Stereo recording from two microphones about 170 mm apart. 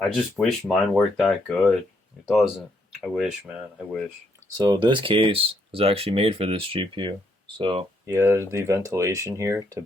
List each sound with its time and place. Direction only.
0.1 s speech: centre (ahead or behind)
4.5 s speech: 20° right (ahead or behind)
8.0 s speech: 15° right (ahead or behind)